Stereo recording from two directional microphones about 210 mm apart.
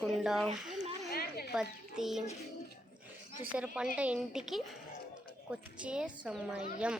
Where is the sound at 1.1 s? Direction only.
45° left (ahead or behind).